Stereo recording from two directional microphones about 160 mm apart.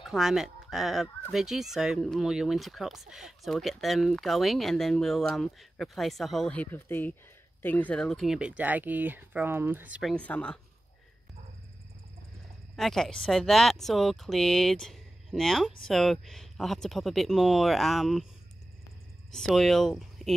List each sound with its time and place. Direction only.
0.0 s speech: 5° right (ahead or behind)
10.0 s speech: 10° left (ahead or behind)
12.7 s speech: 5° left (ahead or behind)
19.3 s speech: 5° left (ahead or behind)